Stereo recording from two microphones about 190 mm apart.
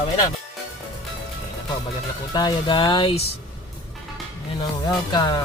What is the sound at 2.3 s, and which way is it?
Speech, 20° left (ahead or behind).